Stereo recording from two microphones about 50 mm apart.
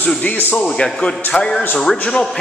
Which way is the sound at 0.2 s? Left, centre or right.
Left.